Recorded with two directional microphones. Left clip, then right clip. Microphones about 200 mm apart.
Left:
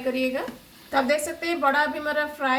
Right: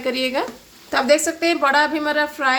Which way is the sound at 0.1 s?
60° right (ahead or behind).